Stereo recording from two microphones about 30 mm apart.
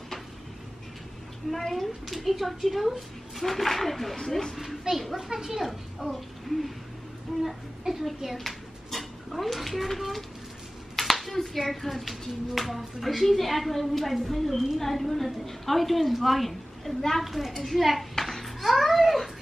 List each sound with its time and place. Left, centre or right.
1.7 s a child's voice: centre
3.4 s a child's voice: centre
4.2 s speech: centre
5.1 s a child's voice: centre
8.5 s a sound: centre
9.8 s a child's voice: centre
18.2 s a sound: centre